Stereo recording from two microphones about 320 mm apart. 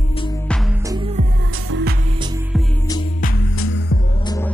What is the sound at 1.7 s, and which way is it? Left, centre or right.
Music, right.